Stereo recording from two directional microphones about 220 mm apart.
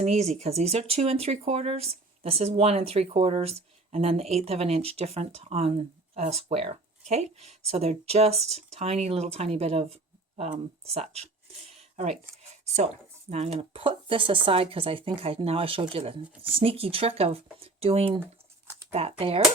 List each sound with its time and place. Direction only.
0.0 s speech: 30° right (ahead or behind)
11.7 s a sound: 30° right (ahead or behind)
12.4 s speech: 30° right (ahead or behind)